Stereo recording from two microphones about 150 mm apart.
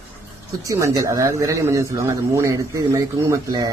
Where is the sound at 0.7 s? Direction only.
20° right (ahead or behind).